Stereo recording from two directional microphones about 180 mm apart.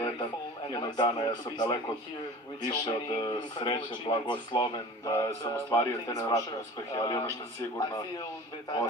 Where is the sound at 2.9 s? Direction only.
25° left (ahead or behind).